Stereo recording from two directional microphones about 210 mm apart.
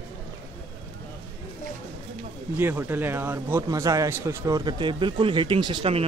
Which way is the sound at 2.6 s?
10° right (ahead or behind).